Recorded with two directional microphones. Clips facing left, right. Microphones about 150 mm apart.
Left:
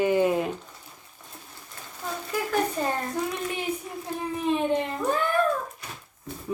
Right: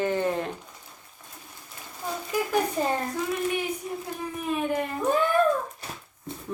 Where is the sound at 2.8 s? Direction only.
10° right (ahead or behind).